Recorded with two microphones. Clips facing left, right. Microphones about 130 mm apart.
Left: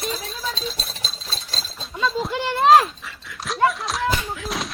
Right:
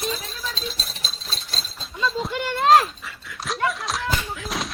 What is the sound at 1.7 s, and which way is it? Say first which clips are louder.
Chink: left 2 dB; centre (ahead or behind).